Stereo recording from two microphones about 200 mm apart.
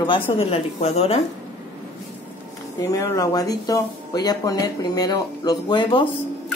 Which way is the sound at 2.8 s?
20° left (ahead or behind).